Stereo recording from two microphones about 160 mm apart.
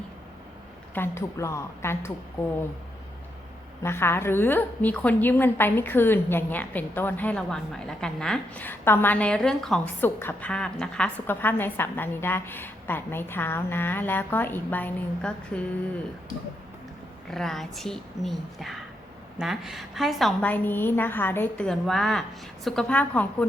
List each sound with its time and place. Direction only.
0.9 s a woman's voice: 15° left (ahead or behind)
3.8 s a woman's voice: 15° left (ahead or behind)
17.3 s a woman's voice: centre (ahead or behind)